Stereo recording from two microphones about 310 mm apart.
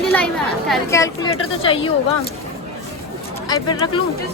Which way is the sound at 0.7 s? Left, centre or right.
Centre.